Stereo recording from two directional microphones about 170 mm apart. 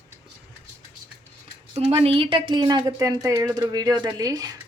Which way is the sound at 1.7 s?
35° right (ahead or behind).